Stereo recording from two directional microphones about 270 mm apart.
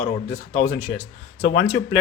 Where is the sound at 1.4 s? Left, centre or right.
Left.